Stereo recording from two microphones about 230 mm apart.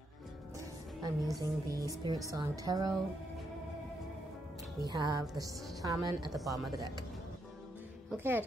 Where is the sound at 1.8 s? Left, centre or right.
Centre.